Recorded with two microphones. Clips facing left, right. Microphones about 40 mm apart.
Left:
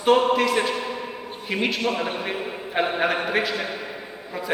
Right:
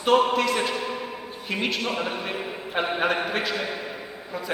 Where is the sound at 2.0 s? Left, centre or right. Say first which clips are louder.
Left 2 dB; centre.